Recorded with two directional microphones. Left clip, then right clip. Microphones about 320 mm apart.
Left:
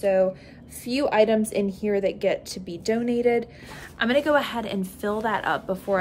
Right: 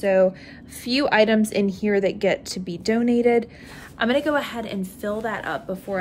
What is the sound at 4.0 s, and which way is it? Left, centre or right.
A woman's voice, centre.